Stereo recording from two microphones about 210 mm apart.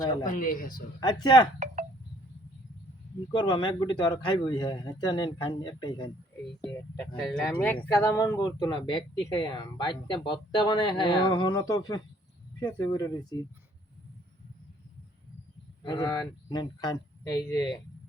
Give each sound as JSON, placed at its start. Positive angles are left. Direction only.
{"t": 0.0, "sound": "speech", "side_deg": 20}
{"t": 0.3, "sound": "speech", "side_deg": 40}
{"t": 0.9, "sound": "speech", "side_deg": 20}
{"t": 1.5, "sound": "a sound", "side_deg": -35}
{"t": 3.3, "sound": "speech", "side_deg": 20}
{"t": 7.2, "sound": "speech", "side_deg": 0}
{"t": 7.6, "sound": "speech", "side_deg": 10}
{"t": 15.8, "sound": "speech", "side_deg": 20}